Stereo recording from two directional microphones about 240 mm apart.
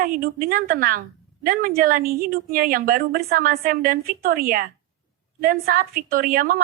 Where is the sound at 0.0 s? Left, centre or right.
Right.